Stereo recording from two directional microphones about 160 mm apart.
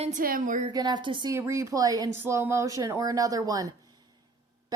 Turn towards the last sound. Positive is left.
turn(degrees=-20)  # may be behind; listen again after turning